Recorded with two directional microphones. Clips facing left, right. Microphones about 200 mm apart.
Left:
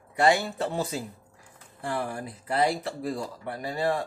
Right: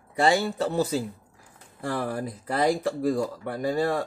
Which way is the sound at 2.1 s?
40° right (ahead or behind).